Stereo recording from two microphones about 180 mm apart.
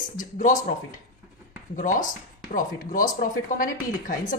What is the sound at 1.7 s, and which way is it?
Speech, 45° left (ahead or behind).